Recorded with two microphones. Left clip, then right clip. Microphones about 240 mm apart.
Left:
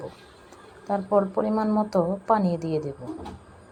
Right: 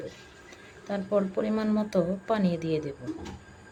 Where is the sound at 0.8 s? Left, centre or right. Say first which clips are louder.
Left 5 dB; centre.